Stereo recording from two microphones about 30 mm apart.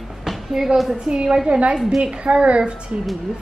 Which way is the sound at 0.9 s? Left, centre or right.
Right.